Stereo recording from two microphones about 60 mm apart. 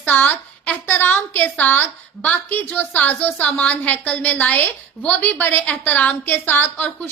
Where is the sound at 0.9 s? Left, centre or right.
Left.